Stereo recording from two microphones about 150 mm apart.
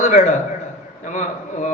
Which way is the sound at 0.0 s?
50° left (ahead or behind).